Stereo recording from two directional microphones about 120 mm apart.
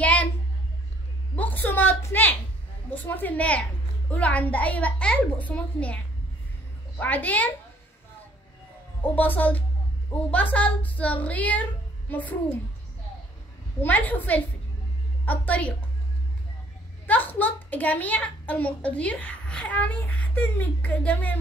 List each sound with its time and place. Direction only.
0.0 s a sound: 10° left (ahead or behind)
1.3 s a woman's voice: 15° left (ahead or behind)
7.0 s a woman's voice: 15° left (ahead or behind)
9.1 s a woman's voice: 15° left (ahead or behind)
13.8 s a woman's voice: 15° left (ahead or behind)
17.0 s a child's voice: 15° left (ahead or behind)